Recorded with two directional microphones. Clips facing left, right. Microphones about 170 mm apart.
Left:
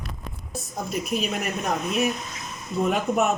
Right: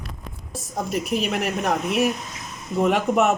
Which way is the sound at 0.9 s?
75° right (ahead or behind).